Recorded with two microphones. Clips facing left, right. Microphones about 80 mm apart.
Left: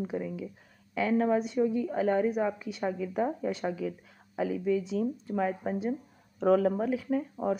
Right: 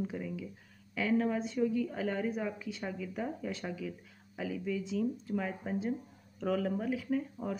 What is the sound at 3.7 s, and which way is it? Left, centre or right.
A woman's voice, left.